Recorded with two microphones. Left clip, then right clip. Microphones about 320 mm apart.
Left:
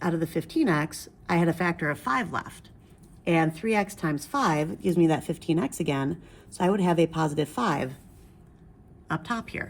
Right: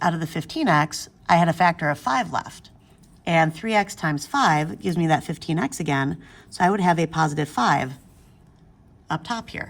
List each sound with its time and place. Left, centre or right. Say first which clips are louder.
0.0 s a woman's voice: right 4 dB; centre
9.0 s speech: right 3 dB; centre